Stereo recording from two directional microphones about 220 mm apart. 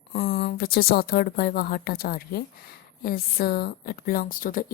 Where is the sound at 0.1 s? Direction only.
40° left (ahead or behind).